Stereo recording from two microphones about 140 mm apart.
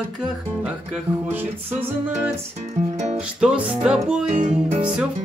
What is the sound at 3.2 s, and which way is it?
Music, 5° right (ahead or behind).